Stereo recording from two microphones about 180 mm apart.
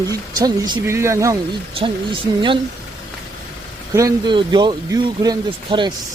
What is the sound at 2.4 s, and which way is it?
Speech, 25° right (ahead or behind).